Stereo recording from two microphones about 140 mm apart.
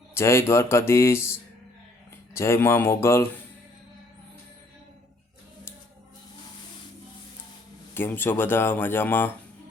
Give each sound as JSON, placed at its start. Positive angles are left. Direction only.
{"t": 0.1, "sound": "speech", "side_deg": 20}
{"t": 7.9, "sound": "speech", "side_deg": 15}